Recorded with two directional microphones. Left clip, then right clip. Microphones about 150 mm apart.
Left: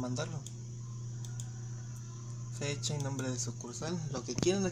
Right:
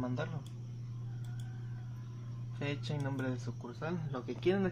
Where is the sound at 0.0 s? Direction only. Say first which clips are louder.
Left 1 dB; 10° left (ahead or behind).